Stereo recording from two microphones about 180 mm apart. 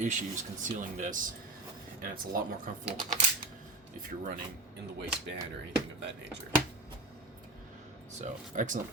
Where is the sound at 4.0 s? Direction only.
50° right (ahead or behind).